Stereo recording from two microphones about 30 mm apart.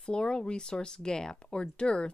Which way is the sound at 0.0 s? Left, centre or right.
Left.